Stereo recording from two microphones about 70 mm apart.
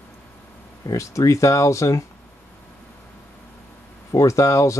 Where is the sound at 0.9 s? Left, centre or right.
Left.